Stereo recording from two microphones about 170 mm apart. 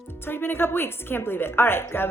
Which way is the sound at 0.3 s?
15° left (ahead or behind).